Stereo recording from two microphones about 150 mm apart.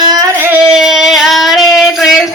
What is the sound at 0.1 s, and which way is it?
Singing, 25° right (ahead or behind).